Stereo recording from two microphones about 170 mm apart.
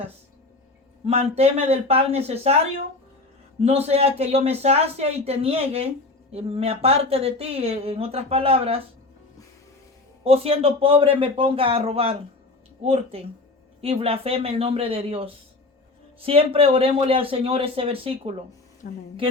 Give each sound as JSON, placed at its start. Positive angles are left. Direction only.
{"t": 1.0, "sound": "speech", "side_deg": -35}
{"t": 3.6, "sound": "speech", "side_deg": -40}
{"t": 10.2, "sound": "speech", "side_deg": -35}
{"t": 18.8, "sound": "a woman's voice", "side_deg": 60}